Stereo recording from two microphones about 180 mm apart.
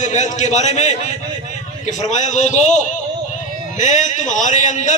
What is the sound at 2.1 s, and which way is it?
Speech, 40° left (ahead or behind).